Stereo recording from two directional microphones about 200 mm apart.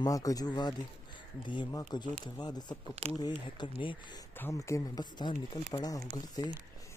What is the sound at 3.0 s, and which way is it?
Speech, 30° right (ahead or behind).